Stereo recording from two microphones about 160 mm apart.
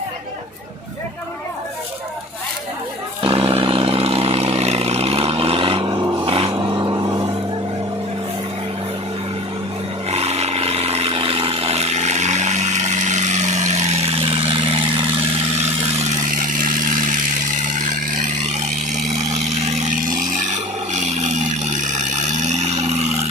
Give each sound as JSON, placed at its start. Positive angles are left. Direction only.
{"t": 3.2, "sound": "vehicle", "side_deg": -35}
{"t": 6.2, "sound": "vehicle", "side_deg": -35}
{"t": 6.5, "sound": "vehicle", "side_deg": -25}
{"t": 10.1, "sound": "a sound", "side_deg": -40}
{"t": 16.0, "sound": "a sound", "side_deg": -55}
{"t": 20.9, "sound": "vehicle", "side_deg": -45}